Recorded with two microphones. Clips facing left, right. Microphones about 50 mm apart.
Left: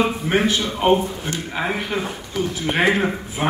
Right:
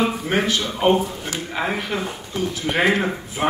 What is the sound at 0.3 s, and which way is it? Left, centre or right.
Speech, right.